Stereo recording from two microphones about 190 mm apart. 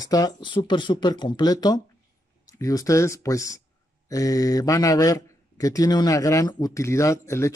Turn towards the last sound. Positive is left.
turn(degrees=15)  # may be behind; listen again after turning